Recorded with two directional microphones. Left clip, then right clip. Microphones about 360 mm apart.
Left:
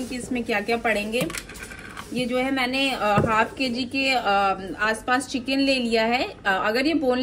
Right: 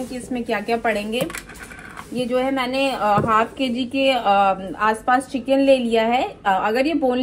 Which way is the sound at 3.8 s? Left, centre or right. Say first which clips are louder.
Right 5 dB; right.